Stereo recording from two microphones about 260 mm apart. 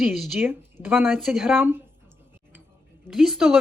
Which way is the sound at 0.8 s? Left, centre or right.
Centre.